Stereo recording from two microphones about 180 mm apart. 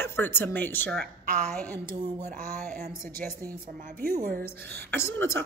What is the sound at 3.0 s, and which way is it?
A woman's voice, 50° right (ahead or behind).